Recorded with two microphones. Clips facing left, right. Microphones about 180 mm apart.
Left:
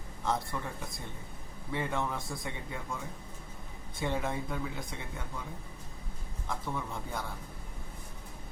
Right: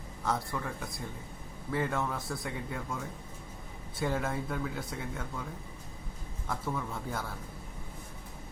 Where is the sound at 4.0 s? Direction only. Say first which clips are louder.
Right 1 dB; centre (ahead or behind).